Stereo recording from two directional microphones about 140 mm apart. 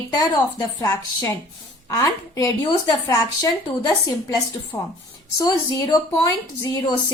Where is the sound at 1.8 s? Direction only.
25° left (ahead or behind).